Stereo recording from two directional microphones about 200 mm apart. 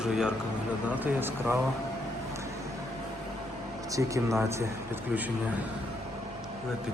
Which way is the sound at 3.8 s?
15° right (ahead or behind).